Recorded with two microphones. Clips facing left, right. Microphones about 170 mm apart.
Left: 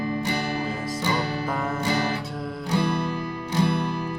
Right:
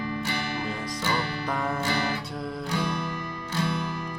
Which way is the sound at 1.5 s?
5° left (ahead or behind).